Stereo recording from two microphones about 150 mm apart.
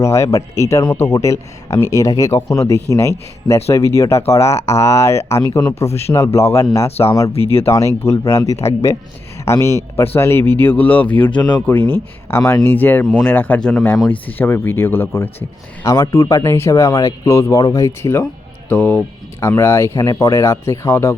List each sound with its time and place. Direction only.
0.0 s speech: 20° left (ahead or behind)
4.5 s speech: 45° left (ahead or behind)
4.8 s speech: 20° left (ahead or behind)
7.3 s speech: 40° left (ahead or behind)
7.7 s speech: 20° left (ahead or behind)
9.5 s speech: 20° left (ahead or behind)